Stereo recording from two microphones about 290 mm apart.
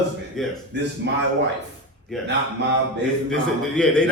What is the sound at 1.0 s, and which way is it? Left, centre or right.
Speech, right.